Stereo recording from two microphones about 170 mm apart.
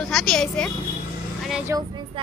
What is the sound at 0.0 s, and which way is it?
Speech, centre (ahead or behind).